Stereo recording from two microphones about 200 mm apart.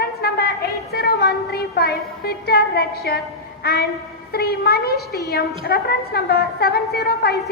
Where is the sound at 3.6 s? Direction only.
50° left (ahead or behind).